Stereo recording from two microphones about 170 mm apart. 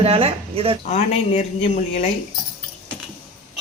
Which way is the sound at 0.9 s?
40° left (ahead or behind).